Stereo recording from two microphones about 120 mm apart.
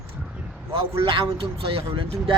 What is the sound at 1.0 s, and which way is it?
Speech, 45° right (ahead or behind).